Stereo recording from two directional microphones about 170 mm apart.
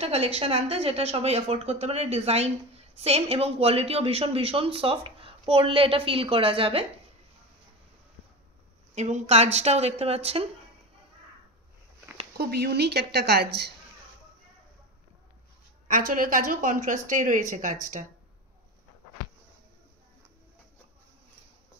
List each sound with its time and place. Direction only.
0.0 s speech: 35° right (ahead or behind)
8.9 s speech: 40° right (ahead or behind)
12.4 s a woman's voice: 70° right (ahead or behind)
15.9 s a woman's voice: 55° right (ahead or behind)